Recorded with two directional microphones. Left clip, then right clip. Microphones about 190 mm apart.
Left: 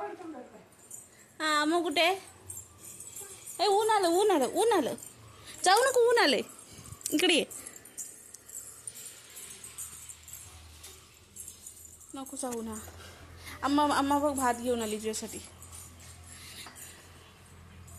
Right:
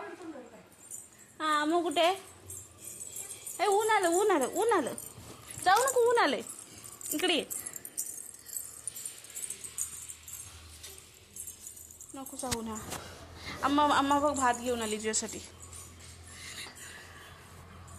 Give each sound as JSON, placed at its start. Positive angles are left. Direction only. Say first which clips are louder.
{"t": 1.4, "sound": "a woman's voice", "louder": "left 1 dB", "side_deg": 20}
{"t": 3.5, "sound": "a woman's voice", "louder": "left 1 dB", "side_deg": 20}
{"t": 5.6, "sound": "speech", "louder": "left 2 dB", "side_deg": 70}
{"t": 12.1, "sound": "a woman's voice", "louder": "even", "side_deg": 20}
{"t": 15.0, "sound": "speech", "louder": "right 2 dB", "side_deg": 5}
{"t": 16.3, "sound": "a sound", "louder": "right 4 dB", "side_deg": 0}